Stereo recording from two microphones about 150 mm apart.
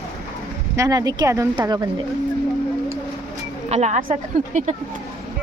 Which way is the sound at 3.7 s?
50° right (ahead or behind).